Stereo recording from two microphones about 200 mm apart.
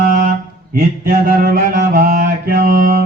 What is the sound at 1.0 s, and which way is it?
Mantra, 50° right (ahead or behind).